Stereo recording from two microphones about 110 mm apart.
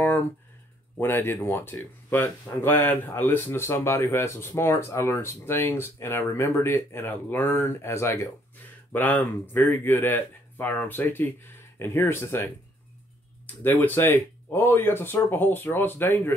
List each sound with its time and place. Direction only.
0.9 s speech: 20° left (ahead or behind)
13.7 s speech: 20° left (ahead or behind)